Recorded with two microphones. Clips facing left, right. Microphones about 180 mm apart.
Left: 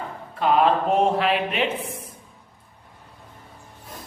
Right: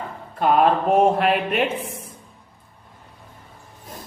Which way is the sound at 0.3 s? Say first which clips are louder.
Right 2 dB; 50° right (ahead or behind).